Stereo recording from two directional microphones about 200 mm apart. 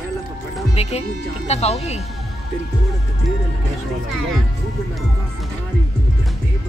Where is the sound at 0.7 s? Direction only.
30° left (ahead or behind).